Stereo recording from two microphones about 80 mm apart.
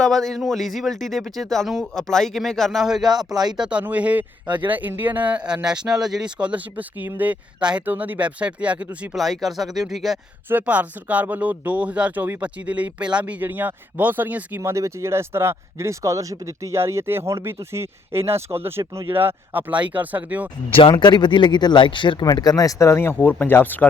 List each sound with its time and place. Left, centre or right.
0.0 s speech: centre
3.6 s speech: centre
9.1 s speech: centre
10.5 s speech: centre
14.6 s speech: right
19.1 s speech: right
20.9 s speech: left
22.2 s speech: left